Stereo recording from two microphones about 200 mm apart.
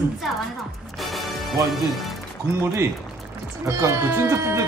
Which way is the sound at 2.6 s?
10° right (ahead or behind).